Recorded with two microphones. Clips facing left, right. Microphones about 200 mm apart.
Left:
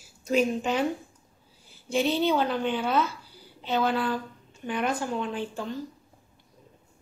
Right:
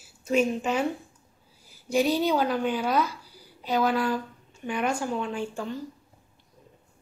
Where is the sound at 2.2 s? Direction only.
10° right (ahead or behind).